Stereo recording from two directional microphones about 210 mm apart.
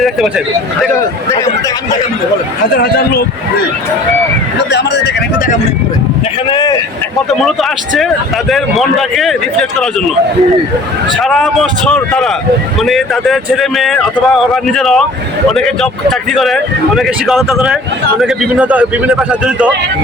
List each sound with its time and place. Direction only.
0.0 s speech: centre (ahead or behind)
2.7 s a man's voice: 50° left (ahead or behind)
4.7 s a man's voice: 55° left (ahead or behind)
6.5 s speech: 20° left (ahead or behind)
7.4 s speech: centre (ahead or behind)
11.2 s speech: centre (ahead or behind)